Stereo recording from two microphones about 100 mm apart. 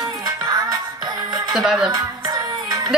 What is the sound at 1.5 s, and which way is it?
Speech, 5° right (ahead or behind).